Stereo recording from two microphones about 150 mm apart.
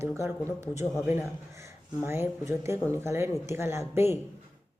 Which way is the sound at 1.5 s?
15° right (ahead or behind).